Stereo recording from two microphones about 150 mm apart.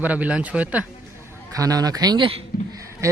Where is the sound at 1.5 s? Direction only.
25° right (ahead or behind).